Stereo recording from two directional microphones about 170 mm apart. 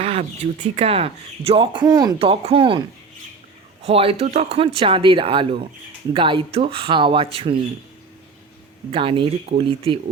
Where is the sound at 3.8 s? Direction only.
35° right (ahead or behind).